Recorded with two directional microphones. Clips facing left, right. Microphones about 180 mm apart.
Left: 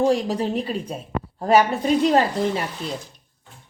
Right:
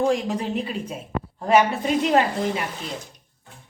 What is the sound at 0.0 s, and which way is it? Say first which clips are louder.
A woman's voice: left 2 dB; 35° left (ahead or behind).